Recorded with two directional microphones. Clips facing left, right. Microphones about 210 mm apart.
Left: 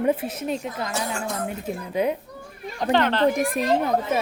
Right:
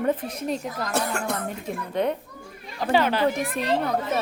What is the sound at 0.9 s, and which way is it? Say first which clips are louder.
Speech: right 5 dB; 60° right (ahead or behind).